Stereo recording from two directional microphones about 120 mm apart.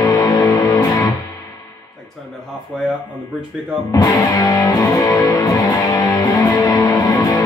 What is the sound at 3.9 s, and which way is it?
Music, 30° left (ahead or behind).